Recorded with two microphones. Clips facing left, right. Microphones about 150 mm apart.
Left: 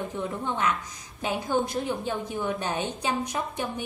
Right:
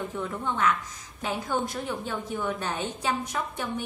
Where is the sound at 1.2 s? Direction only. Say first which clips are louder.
Left 2 dB; 15° left (ahead or behind).